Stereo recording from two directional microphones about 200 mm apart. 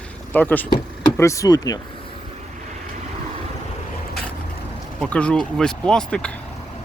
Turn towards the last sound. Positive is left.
turn(degrees=5)  # may be behind; listen again after turning